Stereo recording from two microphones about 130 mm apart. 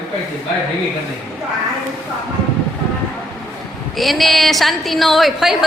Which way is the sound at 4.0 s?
Centre (ahead or behind).